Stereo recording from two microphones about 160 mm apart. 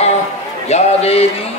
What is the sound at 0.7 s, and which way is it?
Speech, 40° left (ahead or behind).